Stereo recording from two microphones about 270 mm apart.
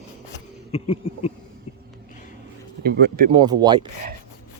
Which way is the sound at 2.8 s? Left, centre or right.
Right.